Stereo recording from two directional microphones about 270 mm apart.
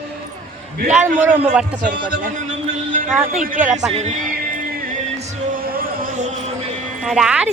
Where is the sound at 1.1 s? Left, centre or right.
Centre.